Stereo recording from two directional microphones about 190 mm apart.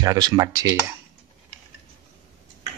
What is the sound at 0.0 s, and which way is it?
Speech, 20° right (ahead or behind).